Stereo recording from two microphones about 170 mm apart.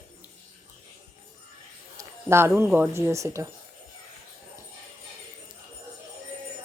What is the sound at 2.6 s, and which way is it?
Speech, 15° right (ahead or behind).